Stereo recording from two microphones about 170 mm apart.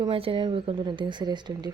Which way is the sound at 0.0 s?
35° right (ahead or behind).